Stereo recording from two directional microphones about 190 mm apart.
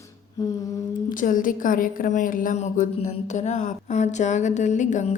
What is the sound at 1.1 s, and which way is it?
A woman's voice, 45° left (ahead or behind).